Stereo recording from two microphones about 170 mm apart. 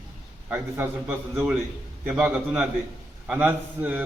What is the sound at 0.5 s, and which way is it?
A man's voice, 10° right (ahead or behind).